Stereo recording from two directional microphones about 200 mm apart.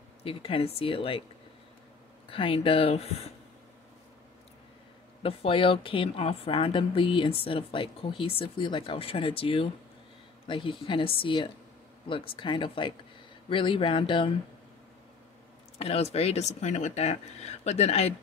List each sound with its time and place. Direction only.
0.2 s a woman's voice: 30° left (ahead or behind)
2.2 s a woman's voice: 25° left (ahead or behind)
5.2 s a woman's voice: 30° left (ahead or behind)
15.8 s speech: 30° left (ahead or behind)